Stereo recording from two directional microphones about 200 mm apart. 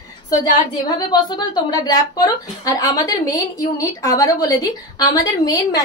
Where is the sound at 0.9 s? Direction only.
20° left (ahead or behind).